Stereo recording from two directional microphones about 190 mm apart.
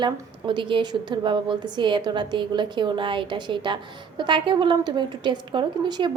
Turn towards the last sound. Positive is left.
turn(degrees=-25)  # may be behind; listen again after turning